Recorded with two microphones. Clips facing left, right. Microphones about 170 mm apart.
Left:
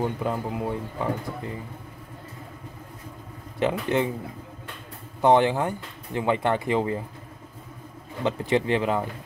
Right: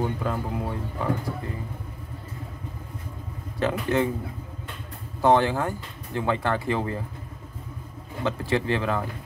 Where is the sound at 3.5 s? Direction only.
20° left (ahead or behind).